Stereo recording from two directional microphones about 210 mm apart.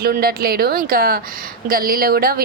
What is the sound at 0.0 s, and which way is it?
A woman's voice, 45° right (ahead or behind).